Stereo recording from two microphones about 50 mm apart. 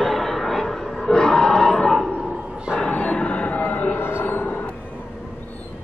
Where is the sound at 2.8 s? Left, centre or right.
Left.